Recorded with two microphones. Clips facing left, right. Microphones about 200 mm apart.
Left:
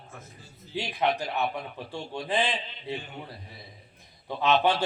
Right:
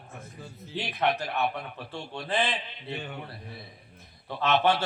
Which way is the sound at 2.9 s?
60° right (ahead or behind).